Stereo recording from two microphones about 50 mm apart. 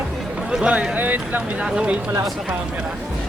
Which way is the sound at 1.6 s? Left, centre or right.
Right.